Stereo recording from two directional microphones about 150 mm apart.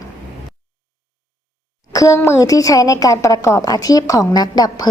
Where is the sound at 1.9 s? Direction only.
20° left (ahead or behind).